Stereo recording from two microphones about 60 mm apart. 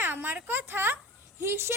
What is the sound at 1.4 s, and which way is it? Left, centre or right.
Child singing, right.